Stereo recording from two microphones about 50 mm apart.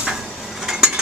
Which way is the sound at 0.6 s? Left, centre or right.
Centre.